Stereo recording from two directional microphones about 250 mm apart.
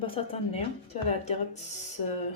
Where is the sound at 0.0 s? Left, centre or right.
Left.